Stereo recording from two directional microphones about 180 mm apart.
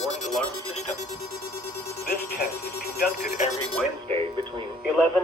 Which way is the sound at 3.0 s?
50° left (ahead or behind).